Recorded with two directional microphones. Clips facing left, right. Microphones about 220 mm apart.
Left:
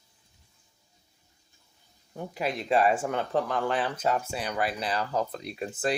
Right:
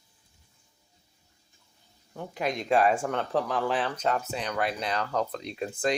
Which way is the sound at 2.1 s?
5° left (ahead or behind).